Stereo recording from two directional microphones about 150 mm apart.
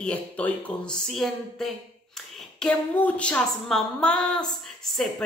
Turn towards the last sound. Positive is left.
turn(degrees=5)  # may be behind; listen again after turning